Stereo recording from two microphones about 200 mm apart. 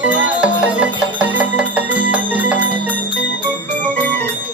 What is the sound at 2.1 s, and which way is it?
Music, 10° right (ahead or behind).